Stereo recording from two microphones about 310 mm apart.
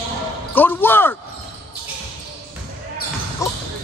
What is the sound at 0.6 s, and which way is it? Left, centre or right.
Speech, centre.